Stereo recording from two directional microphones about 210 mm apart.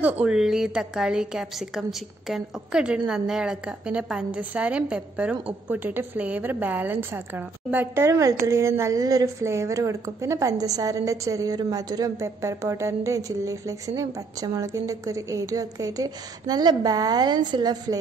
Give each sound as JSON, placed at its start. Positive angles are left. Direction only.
{"t": 0.2, "sound": "a woman's voice", "side_deg": -5}